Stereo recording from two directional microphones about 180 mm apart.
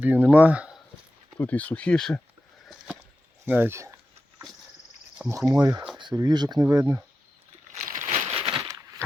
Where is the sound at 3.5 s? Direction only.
10° right (ahead or behind).